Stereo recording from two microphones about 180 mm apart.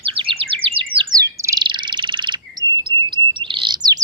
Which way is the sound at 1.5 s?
25° right (ahead or behind).